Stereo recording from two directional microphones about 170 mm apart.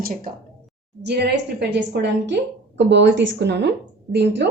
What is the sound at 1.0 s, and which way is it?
A woman's voice, 80° right.